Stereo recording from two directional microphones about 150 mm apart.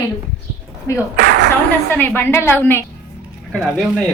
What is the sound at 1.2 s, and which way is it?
Speech, 70° right (ahead or behind).